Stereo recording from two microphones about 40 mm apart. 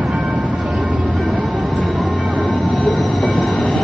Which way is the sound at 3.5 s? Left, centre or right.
Left.